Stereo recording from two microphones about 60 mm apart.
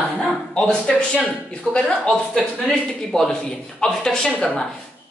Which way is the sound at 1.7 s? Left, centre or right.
Centre.